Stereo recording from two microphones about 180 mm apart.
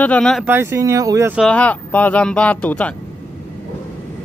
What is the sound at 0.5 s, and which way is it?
Speech, 15° right (ahead or behind).